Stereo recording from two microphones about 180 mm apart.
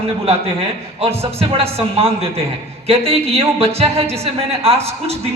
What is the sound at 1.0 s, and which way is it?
A woman's voice, 35° right (ahead or behind).